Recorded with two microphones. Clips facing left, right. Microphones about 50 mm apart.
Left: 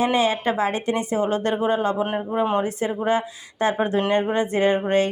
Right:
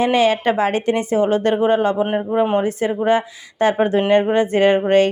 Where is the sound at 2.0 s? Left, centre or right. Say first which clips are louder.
Right 5 dB; right.